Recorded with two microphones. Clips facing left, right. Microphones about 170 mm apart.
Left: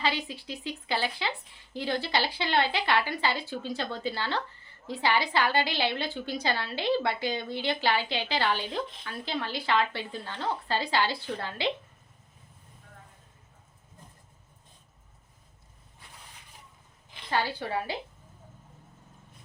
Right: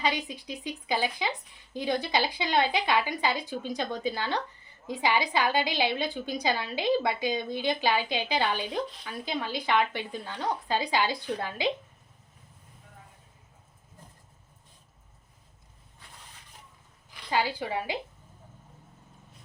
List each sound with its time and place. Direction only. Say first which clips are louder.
0.0 s speech: right 1 dB; 15° right (ahead or behind)
17.3 s speech: right 1 dB; 15° right (ahead or behind)